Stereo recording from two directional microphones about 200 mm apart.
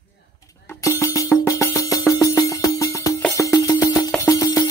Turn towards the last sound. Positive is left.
turn(degrees=15)  # may be behind; listen again after turning